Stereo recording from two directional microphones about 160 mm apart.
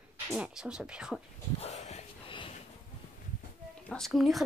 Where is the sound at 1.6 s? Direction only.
45° left (ahead or behind).